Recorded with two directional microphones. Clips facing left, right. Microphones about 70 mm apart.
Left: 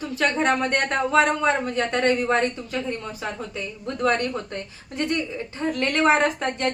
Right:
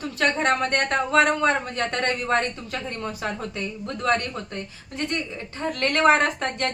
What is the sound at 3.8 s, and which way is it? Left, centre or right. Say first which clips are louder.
Speech: left 2 dB; left.